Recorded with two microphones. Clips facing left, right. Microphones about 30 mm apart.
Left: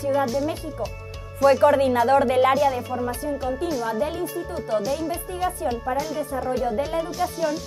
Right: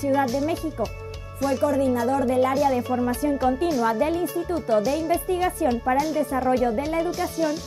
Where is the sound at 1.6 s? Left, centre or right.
Left.